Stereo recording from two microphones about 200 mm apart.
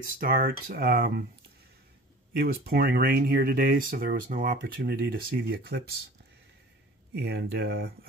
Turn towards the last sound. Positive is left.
turn(degrees=-55)  # may be behind; listen again after turning